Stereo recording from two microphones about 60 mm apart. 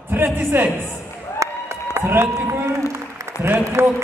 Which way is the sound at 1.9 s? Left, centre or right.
Right.